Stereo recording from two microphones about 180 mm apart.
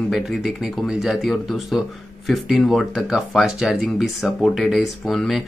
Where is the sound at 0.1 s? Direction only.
Centre (ahead or behind).